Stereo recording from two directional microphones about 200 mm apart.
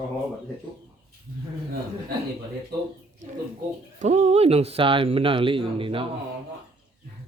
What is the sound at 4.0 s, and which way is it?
Speech, 35° right (ahead or behind).